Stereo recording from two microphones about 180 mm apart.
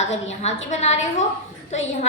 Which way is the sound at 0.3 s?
40° left (ahead or behind).